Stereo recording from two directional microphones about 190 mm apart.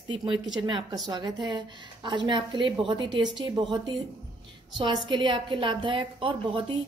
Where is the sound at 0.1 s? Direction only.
25° right (ahead or behind).